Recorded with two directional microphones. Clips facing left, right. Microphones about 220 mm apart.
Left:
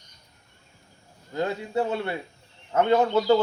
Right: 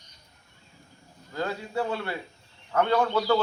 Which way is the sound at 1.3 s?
20° left (ahead or behind).